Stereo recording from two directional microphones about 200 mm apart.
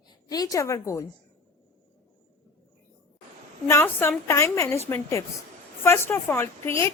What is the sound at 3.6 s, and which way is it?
A woman's voice, 10° left (ahead or behind).